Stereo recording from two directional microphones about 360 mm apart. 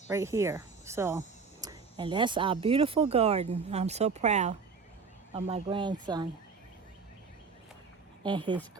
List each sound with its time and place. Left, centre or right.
0.1 s speech: centre
8.2 s speech: centre